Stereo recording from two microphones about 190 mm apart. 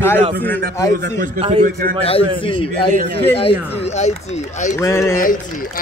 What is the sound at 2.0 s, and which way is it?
Speech, 30° left (ahead or behind).